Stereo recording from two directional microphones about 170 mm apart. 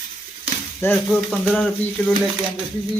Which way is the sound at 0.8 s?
15° left (ahead or behind).